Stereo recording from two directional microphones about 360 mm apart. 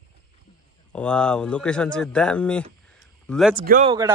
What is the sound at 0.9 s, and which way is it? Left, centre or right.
A man's voice, centre.